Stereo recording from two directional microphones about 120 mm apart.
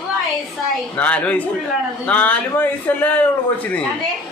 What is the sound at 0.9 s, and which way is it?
A man's voice, 10° left (ahead or behind).